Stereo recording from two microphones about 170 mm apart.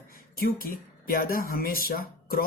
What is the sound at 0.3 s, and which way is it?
Speech, 60° left (ahead or behind).